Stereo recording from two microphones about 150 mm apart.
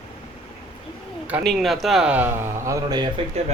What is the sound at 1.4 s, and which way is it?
Speech, centre (ahead or behind).